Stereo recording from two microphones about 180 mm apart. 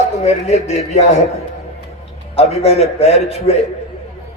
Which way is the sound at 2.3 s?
35° left (ahead or behind).